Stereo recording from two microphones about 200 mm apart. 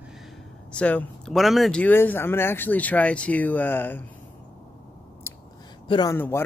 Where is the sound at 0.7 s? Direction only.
5° left (ahead or behind).